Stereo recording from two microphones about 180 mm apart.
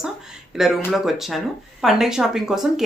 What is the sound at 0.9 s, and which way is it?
Speech, centre (ahead or behind).